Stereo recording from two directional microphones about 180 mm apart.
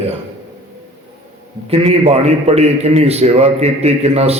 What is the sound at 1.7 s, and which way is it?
A man's voice, 35° right (ahead or behind).